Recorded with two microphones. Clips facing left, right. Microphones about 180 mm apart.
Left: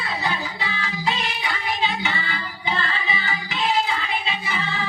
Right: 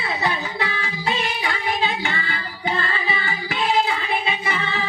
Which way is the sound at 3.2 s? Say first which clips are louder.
Right 2 dB; 55° right (ahead or behind).